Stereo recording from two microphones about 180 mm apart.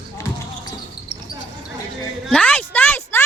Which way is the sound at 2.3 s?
10° left (ahead or behind).